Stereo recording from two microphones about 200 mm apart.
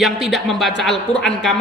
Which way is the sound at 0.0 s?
Centre (ahead or behind).